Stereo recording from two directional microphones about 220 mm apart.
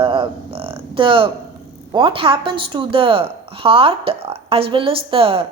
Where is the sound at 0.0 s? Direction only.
25° right (ahead or behind).